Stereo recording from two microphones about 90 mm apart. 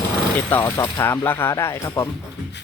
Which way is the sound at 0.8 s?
30° left (ahead or behind).